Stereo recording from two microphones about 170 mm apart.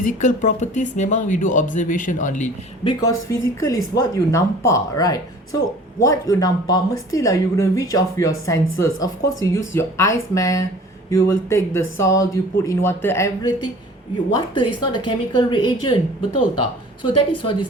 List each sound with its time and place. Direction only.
0.0 s speech: 50° left (ahead or behind)
2.8 s speech: 20° left (ahead or behind)
17.0 s a woman's voice: 30° left (ahead or behind)